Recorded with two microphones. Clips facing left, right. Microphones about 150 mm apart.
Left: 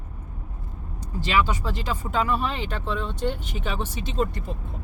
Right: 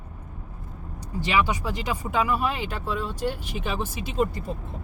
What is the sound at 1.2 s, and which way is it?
Speech, 15° right (ahead or behind).